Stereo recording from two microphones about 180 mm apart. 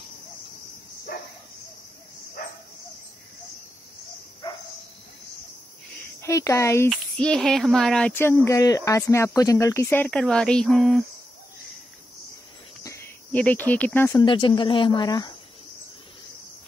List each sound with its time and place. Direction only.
6.2 s speech: 15° left (ahead or behind)
6.9 s speech: 5° left (ahead or behind)
12.8 s cricket: 10° left (ahead or behind)
14.1 s speech: 25° left (ahead or behind)